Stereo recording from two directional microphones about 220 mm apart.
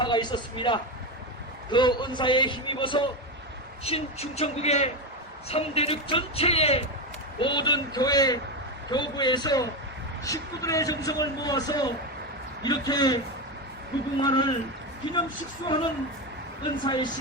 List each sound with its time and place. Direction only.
0.0 s a man's voice: 20° left (ahead or behind)
14.2 s a man's voice: 20° left (ahead or behind)
15.6 s a man's voice: 20° left (ahead or behind)